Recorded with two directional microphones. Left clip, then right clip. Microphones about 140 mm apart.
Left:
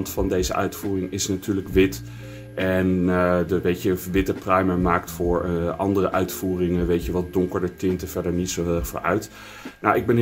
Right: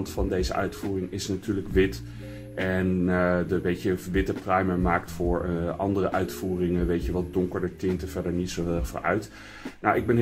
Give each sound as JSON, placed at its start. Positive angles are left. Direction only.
{"t": 0.0, "sound": "speech", "side_deg": 30}